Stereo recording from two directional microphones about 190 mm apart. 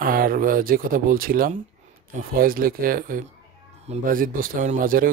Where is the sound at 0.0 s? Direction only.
50° right (ahead or behind).